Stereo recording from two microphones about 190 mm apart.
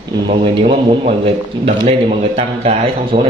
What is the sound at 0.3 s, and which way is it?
A man's voice, 30° right (ahead or behind).